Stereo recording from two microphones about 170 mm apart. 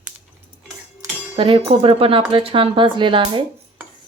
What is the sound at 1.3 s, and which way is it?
Speech, 30° right (ahead or behind).